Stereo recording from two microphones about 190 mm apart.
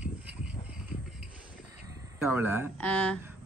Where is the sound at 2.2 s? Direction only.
10° right (ahead or behind).